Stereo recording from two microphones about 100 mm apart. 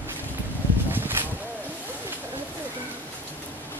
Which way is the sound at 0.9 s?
20° right (ahead or behind).